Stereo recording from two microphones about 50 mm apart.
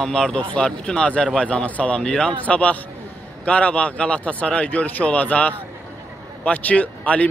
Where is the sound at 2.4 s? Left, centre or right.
Left.